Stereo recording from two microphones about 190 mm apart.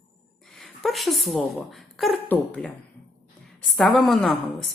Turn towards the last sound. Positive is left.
turn(degrees=0)  # may be behind; listen again after turning